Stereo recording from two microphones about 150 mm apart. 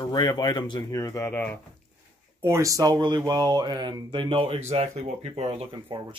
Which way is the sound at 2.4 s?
20° right (ahead or behind).